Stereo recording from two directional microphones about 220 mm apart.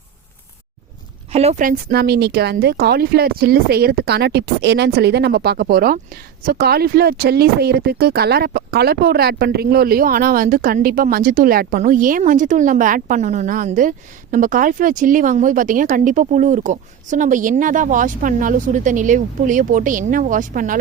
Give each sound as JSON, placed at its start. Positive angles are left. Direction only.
{"t": 1.3, "sound": "speech", "side_deg": -30}